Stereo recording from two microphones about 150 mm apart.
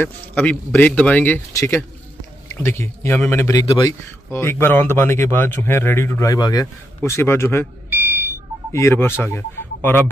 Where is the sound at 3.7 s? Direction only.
30° left (ahead or behind).